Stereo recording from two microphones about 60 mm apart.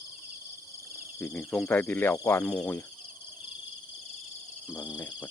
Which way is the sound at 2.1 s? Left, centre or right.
Left.